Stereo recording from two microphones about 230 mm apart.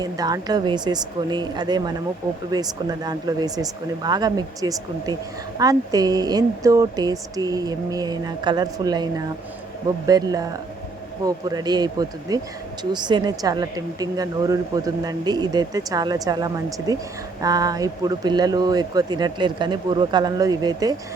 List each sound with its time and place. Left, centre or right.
0.0 s a woman's voice: centre